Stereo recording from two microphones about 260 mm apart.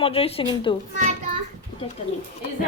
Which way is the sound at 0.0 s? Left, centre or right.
Left.